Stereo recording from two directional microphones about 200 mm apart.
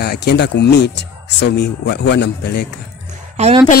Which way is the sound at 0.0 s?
55° left (ahead or behind).